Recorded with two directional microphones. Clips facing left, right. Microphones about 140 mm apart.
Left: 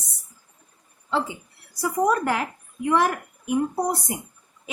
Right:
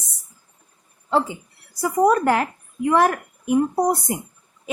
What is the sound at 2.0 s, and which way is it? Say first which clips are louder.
Speech: right 6 dB; 45° right (ahead or behind).